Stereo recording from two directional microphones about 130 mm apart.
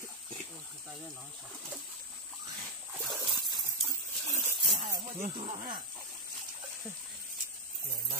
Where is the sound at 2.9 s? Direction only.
Centre (ahead or behind).